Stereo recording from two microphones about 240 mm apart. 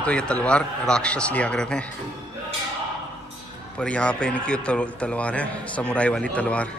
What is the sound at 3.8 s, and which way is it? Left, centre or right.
A man's voice, centre.